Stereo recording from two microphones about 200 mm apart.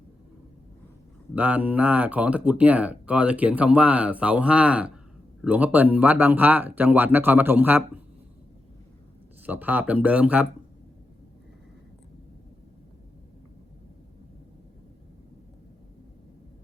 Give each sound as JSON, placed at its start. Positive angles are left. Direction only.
{"t": 1.4, "sound": "speech", "side_deg": -10}
{"t": 9.5, "sound": "speech", "side_deg": -10}